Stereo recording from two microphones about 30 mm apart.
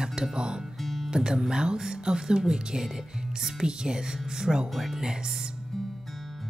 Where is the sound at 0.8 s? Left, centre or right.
Centre.